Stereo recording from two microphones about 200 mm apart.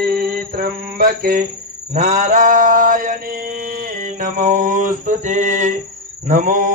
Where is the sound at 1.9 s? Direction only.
35° right (ahead or behind).